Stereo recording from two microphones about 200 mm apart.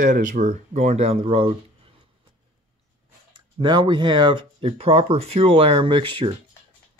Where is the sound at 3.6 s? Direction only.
25° right (ahead or behind).